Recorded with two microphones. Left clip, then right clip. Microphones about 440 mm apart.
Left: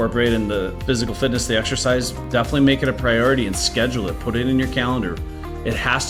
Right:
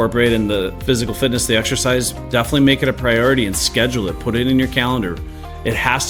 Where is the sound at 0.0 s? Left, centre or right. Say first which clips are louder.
Right 4 dB; right.